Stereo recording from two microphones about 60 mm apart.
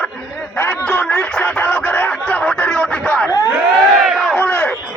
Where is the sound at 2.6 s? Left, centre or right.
Centre.